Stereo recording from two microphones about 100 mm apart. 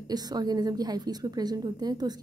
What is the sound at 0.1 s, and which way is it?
A woman's voice, 40° right (ahead or behind).